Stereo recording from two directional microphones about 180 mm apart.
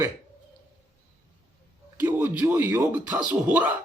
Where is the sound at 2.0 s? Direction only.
10° right (ahead or behind).